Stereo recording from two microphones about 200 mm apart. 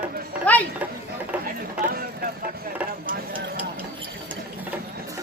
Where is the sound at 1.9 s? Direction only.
45° right (ahead or behind).